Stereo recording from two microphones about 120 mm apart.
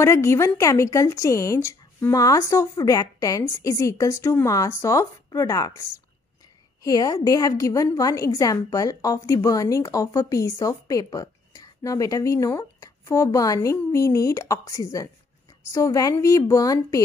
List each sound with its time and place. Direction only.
0.0 s a woman's voice: 20° left (ahead or behind)